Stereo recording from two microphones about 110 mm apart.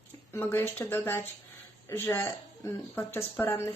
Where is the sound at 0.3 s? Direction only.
20° left (ahead or behind).